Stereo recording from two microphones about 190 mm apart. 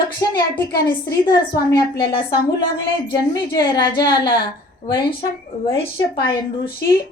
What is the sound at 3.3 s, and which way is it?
Speech, 20° left (ahead or behind).